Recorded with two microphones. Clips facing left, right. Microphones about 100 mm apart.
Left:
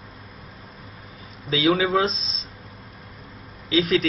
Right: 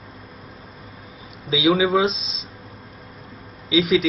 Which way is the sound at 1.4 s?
5° right (ahead or behind).